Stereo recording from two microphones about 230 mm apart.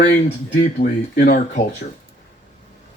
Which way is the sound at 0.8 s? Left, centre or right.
Left.